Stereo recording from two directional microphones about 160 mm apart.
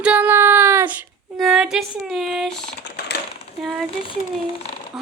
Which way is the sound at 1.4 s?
Centre (ahead or behind).